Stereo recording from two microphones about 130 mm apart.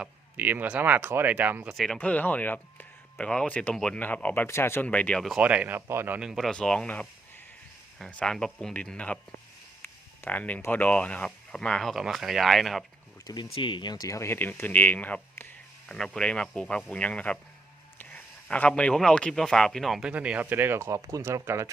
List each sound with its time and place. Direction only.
0.0 s speech: 15° right (ahead or behind)
1.7 s speech: centre (ahead or behind)
2.0 s speech: 10° left (ahead or behind)
5.4 s speech: 10° right (ahead or behind)
6.1 s speech: 5° right (ahead or behind)
13.2 s speech: 35° left (ahead or behind); by 21.7 s 20° right (ahead or behind)